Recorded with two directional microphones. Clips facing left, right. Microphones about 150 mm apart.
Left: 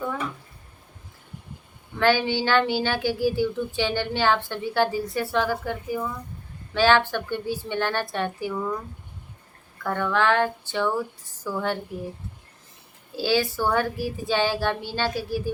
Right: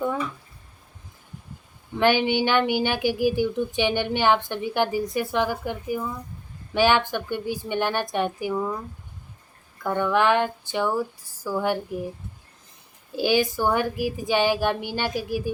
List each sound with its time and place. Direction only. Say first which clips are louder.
2.0 s a woman's voice: right 1 dB; 15° right (ahead or behind)
9.8 s a woman's voice: right 2 dB; 15° right (ahead or behind)
13.1 s a woman's voice: right 2 dB; 15° right (ahead or behind)